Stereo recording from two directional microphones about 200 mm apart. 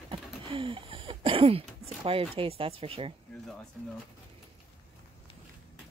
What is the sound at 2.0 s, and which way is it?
Speech, 25° right (ahead or behind).